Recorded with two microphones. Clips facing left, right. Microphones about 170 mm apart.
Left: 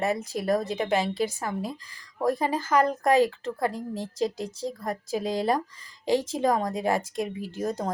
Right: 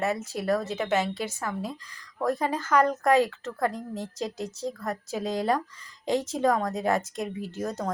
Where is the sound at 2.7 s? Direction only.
30° left (ahead or behind).